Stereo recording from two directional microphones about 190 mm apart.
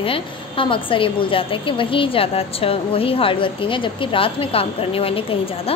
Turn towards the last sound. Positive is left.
turn(degrees=30)  # may be behind; listen again after turning